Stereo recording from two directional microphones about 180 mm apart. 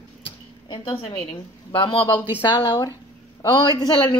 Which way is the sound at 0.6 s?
25° left (ahead or behind).